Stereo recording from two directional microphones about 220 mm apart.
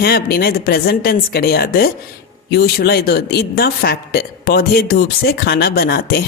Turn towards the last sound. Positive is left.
turn(degrees=45)  # may be behind; listen again after turning